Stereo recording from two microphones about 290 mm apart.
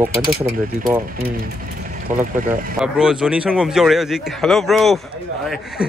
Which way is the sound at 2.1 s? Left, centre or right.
Right.